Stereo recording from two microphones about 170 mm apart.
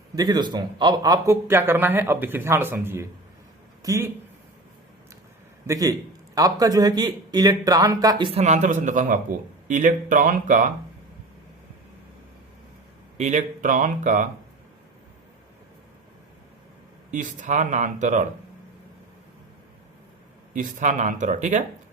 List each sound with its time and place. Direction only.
0.2 s a man's voice: 25° right (ahead or behind)
5.6 s a man's voice: 20° right (ahead or behind)
8.3 s speech: 40° right (ahead or behind)
13.1 s speech: 45° right (ahead or behind)
17.1 s speech: 45° right (ahead or behind)
20.5 s speech: 50° right (ahead or behind)